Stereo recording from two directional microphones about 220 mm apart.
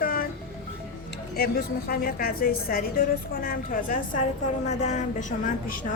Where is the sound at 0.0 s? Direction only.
40° left (ahead or behind).